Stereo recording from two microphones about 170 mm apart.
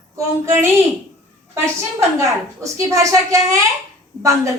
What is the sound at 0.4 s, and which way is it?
Speech, 15° right (ahead or behind).